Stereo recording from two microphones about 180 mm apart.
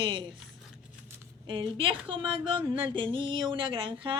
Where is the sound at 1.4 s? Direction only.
30° right (ahead or behind).